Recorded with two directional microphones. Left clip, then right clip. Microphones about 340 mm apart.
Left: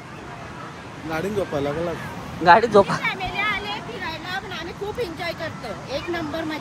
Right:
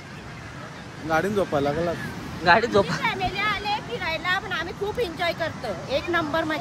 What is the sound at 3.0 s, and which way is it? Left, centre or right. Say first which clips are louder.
Hubbub: even; right.